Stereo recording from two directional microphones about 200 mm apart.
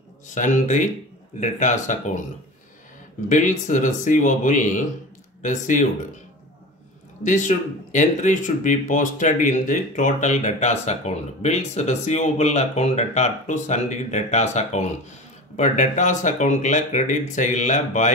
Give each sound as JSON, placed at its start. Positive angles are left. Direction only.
{"t": 0.3, "sound": "speech", "side_deg": 40}
{"t": 3.3, "sound": "speech", "side_deg": 40}
{"t": 7.2, "sound": "speech", "side_deg": 40}